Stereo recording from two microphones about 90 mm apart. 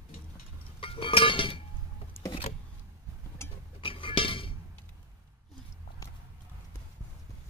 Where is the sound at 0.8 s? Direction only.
75° left (ahead or behind).